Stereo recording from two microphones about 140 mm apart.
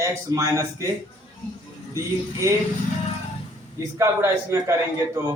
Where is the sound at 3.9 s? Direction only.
20° right (ahead or behind).